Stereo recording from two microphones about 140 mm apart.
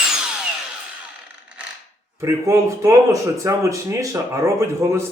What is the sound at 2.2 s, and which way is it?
Speech, 20° right (ahead or behind).